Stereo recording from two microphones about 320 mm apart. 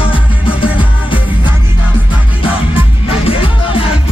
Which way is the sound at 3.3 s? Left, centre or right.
Centre.